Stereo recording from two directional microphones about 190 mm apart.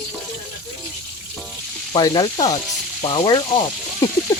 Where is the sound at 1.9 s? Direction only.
20° left (ahead or behind).